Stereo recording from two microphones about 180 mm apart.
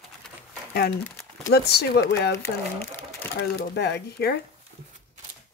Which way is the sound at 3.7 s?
70° left (ahead or behind).